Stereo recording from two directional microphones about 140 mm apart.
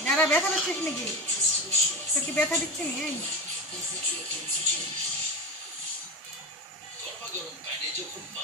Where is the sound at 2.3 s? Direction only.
15° left (ahead or behind).